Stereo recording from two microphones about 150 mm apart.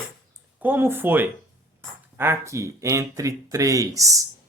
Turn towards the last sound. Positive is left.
turn(degrees=-20)  # may be behind; listen again after turning